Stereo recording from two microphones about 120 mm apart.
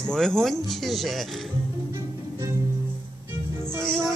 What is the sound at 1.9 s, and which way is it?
Music, 25° right (ahead or behind).